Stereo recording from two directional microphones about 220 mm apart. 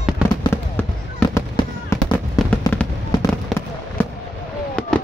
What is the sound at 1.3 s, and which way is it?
Fireworks, 15° left (ahead or behind).